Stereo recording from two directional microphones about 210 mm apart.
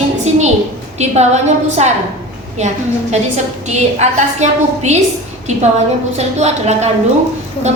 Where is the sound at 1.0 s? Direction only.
30° right (ahead or behind).